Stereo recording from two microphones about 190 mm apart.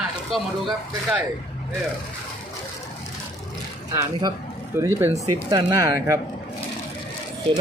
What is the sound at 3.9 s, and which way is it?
Speech, 15° right (ahead or behind).